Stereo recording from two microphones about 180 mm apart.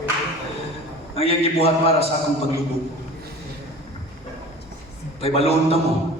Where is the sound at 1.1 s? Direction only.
35° left (ahead or behind).